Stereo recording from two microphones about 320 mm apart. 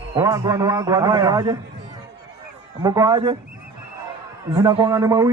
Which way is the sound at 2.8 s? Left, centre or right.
Centre.